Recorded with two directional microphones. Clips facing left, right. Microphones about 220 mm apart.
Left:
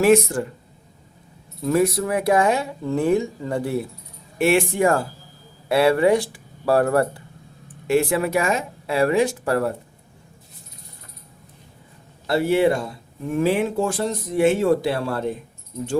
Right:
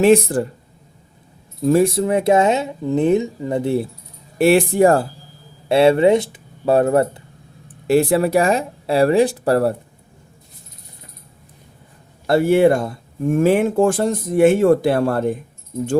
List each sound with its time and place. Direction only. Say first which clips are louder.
0.0 s speech: right 3 dB; 35° right (ahead or behind)
1.6 s speech: right 4 dB; 30° right (ahead or behind)
4.4 s speech: right 5 dB; 35° right (ahead or behind)
5.6 s speech: right 4 dB; 25° right (ahead or behind)
7.9 s speech: right 4 dB; 35° right (ahead or behind)
12.3 s speech: right 5 dB; 50° right (ahead or behind)